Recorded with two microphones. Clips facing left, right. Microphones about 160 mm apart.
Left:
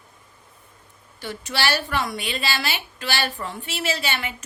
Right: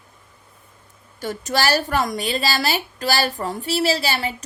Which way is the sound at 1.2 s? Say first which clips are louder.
Right 4 dB; 45° right (ahead or behind).